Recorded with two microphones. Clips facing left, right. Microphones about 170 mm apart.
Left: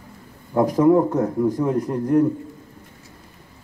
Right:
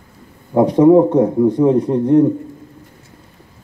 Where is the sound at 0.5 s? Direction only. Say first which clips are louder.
Right 6 dB; 25° right (ahead or behind).